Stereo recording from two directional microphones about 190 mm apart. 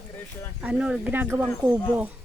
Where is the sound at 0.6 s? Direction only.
5° right (ahead or behind).